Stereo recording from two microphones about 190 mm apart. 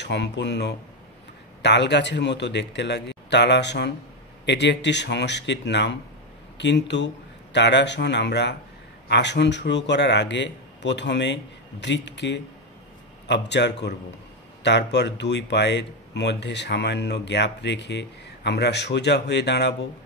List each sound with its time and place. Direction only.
0.0 s speech: 65° left (ahead or behind)